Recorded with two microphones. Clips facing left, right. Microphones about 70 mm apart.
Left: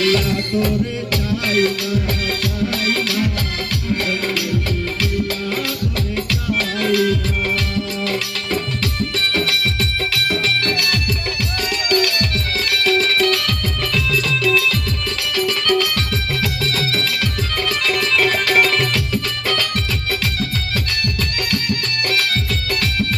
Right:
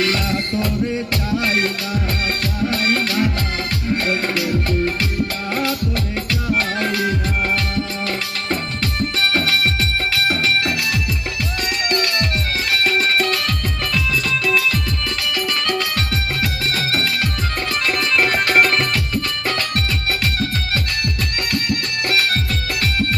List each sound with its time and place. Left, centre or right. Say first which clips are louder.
0.0 s music: left 3 dB; right
6.5 s music: left 2 dB; right
11.9 s music: left 3 dB; right
14.4 s music: left 2 dB; right